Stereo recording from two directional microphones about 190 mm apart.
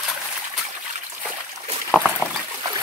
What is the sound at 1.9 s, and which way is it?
Trickle, 5° left (ahead or behind).